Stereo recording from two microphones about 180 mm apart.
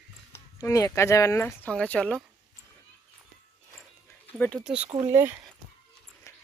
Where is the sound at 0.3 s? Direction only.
20° left (ahead or behind).